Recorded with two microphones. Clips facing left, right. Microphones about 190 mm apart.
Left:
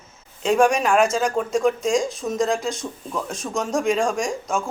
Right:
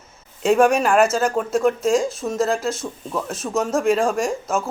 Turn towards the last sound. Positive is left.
turn(degrees=-5)  # may be behind; listen again after turning